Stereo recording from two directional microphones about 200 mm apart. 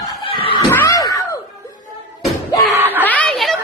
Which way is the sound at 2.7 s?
10° right (ahead or behind).